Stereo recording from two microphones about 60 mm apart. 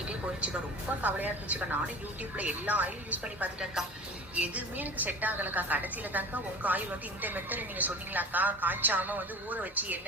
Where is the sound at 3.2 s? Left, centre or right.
Centre.